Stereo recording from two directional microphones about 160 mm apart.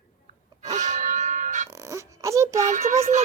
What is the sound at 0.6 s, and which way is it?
Music, 45° right (ahead or behind).